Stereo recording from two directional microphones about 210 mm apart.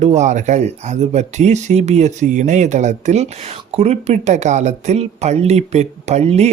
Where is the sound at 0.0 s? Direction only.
35° right (ahead or behind).